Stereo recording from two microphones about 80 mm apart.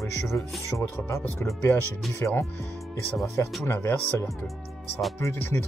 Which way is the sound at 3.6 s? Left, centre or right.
Left.